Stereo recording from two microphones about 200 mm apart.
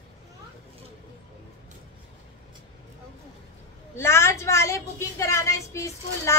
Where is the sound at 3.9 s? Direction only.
15° left (ahead or behind).